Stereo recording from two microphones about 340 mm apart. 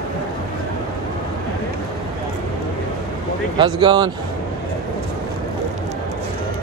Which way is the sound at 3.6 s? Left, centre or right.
Centre.